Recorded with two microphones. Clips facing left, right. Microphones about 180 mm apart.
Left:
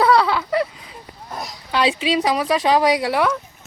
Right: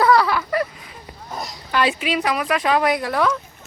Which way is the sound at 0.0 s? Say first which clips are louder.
Even; 20° left (ahead or behind).